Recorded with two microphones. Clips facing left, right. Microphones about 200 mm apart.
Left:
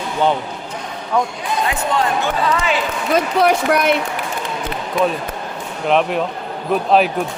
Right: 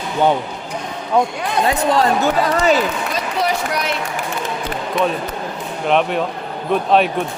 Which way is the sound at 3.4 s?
55° left (ahead or behind).